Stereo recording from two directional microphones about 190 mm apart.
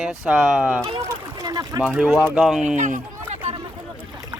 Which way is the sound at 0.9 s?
20° right (ahead or behind).